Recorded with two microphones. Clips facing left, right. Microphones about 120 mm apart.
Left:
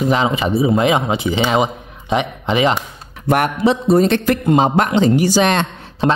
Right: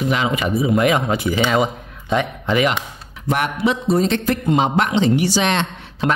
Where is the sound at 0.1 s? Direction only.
30° left (ahead or behind).